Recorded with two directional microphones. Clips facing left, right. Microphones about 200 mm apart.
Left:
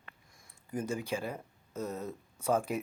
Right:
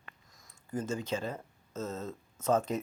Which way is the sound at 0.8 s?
15° left (ahead or behind).